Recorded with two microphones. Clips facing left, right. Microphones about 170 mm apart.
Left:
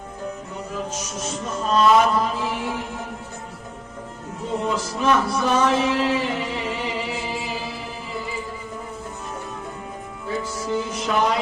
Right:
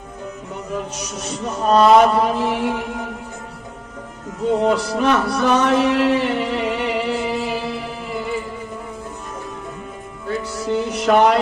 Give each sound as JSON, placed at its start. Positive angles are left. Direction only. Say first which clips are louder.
{"t": 1.2, "sound": "music", "louder": "right 5 dB", "side_deg": -65}
{"t": 4.6, "sound": "music", "louder": "right 3 dB", "side_deg": -65}
{"t": 10.2, "sound": "music", "louder": "right 4 dB", "side_deg": -70}